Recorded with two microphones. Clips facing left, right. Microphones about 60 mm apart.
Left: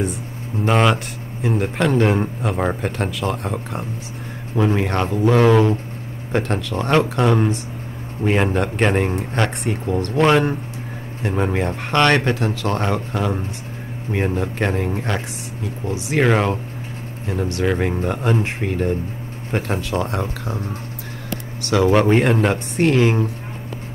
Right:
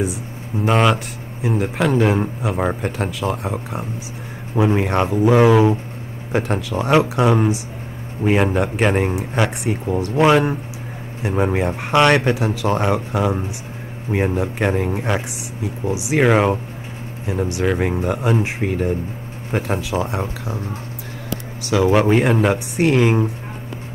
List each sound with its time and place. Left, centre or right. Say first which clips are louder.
0.7 s speech: right 1 dB; centre
21.6 s speech: even; centre